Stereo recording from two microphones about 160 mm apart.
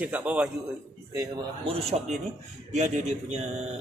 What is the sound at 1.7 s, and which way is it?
Speech, 40° right (ahead or behind).